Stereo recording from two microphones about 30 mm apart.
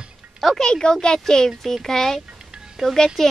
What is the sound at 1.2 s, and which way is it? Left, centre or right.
A child's voice, centre.